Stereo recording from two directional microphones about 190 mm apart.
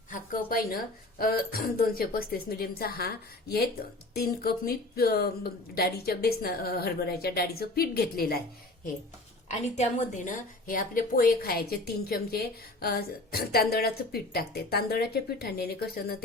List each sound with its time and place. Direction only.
0.1 s a woman's voice: 50° left (ahead or behind)
9.7 s a woman's voice: 40° left (ahead or behind); by 16.1 s 55° left (ahead or behind)